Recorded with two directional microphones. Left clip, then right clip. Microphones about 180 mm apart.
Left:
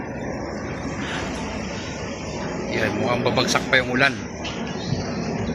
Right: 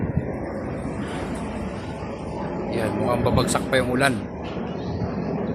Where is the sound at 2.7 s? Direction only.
5° right (ahead or behind).